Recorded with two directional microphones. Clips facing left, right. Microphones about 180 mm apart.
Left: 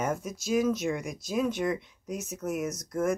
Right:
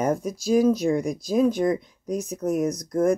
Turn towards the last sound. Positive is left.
turn(degrees=-35)  # may be behind; listen again after turning